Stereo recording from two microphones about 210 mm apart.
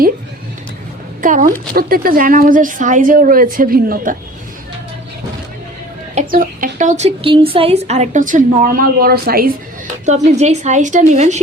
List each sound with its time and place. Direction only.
1.2 s speech: 40° right (ahead or behind)
6.1 s speech: 40° right (ahead or behind)